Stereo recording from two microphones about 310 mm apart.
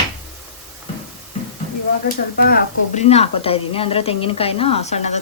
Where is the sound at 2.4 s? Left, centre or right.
Left.